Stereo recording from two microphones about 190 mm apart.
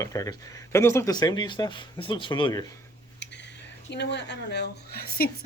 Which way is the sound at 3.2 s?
65° left (ahead or behind).